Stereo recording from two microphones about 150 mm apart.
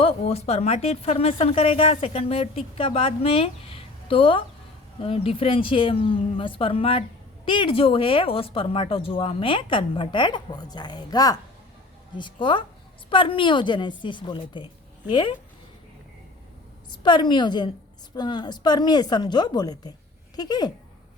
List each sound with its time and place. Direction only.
0.0 s a woman's voice: 40° left (ahead or behind)
16.9 s a woman's voice: 30° left (ahead or behind)